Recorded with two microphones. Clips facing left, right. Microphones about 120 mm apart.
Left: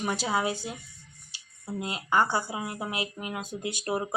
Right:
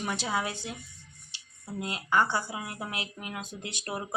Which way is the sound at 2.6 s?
20° left (ahead or behind).